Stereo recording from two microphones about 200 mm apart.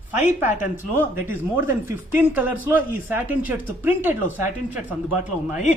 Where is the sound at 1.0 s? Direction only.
10° right (ahead or behind).